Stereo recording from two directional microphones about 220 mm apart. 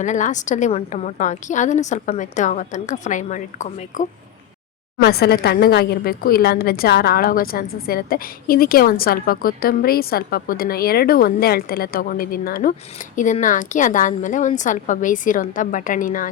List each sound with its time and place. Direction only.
0.0 s a woman's voice: 35° left (ahead or behind)
5.0 s a woman's voice: 45° left (ahead or behind)